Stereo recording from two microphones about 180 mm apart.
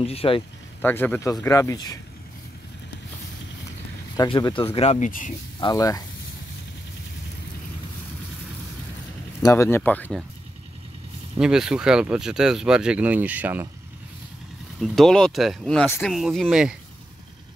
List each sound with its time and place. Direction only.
0.0 s speech: 35° left (ahead or behind)
0.8 s speech: 10° left (ahead or behind)
4.2 s speech: 25° left (ahead or behind); by 5.3 s 45° left (ahead or behind)
5.6 s speech: 20° left (ahead or behind)
9.4 s speech: 15° left (ahead or behind)
11.3 s speech: 5° right (ahead or behind)
14.8 s speech: centre (ahead or behind)